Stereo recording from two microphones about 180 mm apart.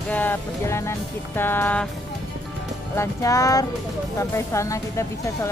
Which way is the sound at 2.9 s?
15° left (ahead or behind).